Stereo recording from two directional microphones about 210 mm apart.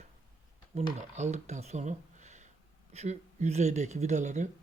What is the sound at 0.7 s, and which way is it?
Speech, 30° right (ahead or behind).